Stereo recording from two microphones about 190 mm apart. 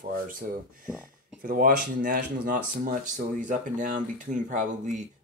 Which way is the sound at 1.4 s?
50° right (ahead or behind).